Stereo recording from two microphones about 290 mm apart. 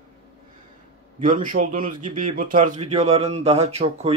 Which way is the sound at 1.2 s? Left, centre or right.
Right.